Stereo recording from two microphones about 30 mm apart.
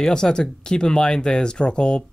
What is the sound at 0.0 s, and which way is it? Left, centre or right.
Speech, left.